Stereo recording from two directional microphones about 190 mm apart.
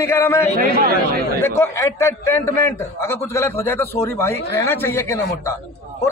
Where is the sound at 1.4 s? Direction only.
15° left (ahead or behind).